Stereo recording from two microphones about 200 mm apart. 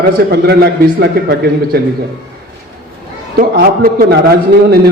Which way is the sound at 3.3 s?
50° right (ahead or behind).